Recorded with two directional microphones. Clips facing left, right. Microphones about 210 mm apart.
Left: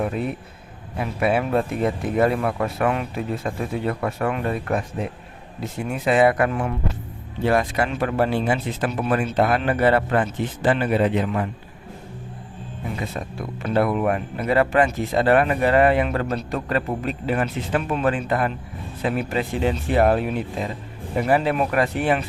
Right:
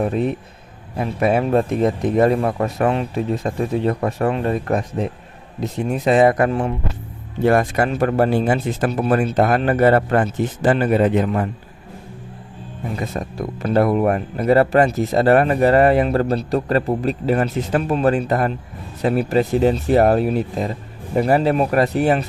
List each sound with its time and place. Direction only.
0.9 s speech: 40° right (ahead or behind)
7.4 s speech: 50° right (ahead or behind)
13.0 s speech: 40° right (ahead or behind)